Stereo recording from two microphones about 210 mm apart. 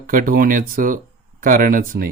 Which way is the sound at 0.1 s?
40° right (ahead or behind).